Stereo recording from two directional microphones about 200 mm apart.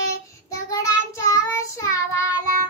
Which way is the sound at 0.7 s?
15° left (ahead or behind).